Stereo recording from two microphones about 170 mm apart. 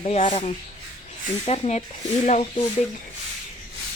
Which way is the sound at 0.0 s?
35° left (ahead or behind).